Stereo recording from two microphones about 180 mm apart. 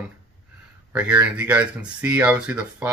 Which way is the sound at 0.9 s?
5° right (ahead or behind).